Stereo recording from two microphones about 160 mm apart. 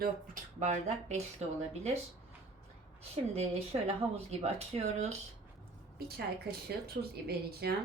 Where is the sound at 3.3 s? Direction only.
40° right (ahead or behind).